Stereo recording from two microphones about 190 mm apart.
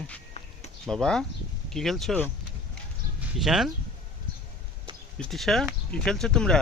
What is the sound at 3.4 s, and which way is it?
Speech, centre (ahead or behind).